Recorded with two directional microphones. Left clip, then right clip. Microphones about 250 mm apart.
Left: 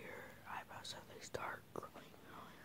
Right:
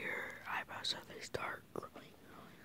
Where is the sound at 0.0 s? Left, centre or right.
Right.